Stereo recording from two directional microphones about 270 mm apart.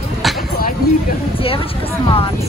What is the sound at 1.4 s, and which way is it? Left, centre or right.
Speech, centre.